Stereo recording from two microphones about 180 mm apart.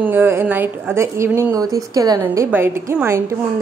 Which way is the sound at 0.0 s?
10° right (ahead or behind).